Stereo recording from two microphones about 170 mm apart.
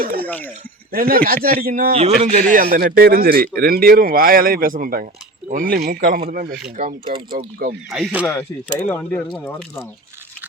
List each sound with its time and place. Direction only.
0.0 s a sound: 60° right (ahead or behind)
0.3 s speech: 10° left (ahead or behind)
0.9 s a man's voice: 60° right (ahead or behind)
1.9 s a man's voice: 40° right (ahead or behind); by 7.8 s 60° right (ahead or behind)
7.9 s speech: centre (ahead or behind)
8.2 s speech: 10° left (ahead or behind)